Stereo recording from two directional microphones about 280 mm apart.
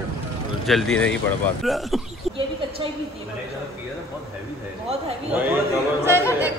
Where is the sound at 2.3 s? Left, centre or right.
Centre.